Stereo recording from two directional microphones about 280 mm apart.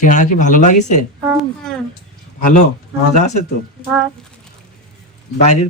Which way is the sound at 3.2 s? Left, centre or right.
Left.